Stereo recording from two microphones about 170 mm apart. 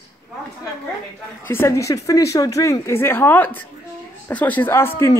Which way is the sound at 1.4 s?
15° left (ahead or behind).